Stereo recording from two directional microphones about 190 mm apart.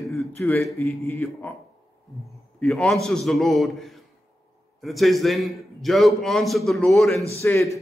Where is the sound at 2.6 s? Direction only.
Centre (ahead or behind).